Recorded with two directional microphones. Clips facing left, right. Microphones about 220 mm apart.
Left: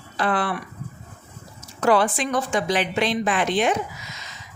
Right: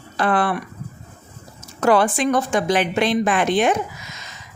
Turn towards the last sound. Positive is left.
turn(degrees=-50)  # may be behind; listen again after turning